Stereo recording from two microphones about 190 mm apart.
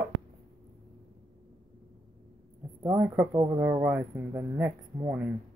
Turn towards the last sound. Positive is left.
turn(degrees=-15)  # may be behind; listen again after turning